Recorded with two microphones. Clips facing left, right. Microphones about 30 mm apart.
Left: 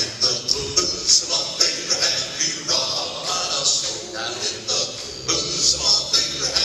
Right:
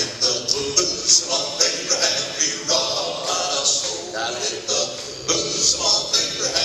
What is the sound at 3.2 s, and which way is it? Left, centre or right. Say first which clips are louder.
Music: even; centre.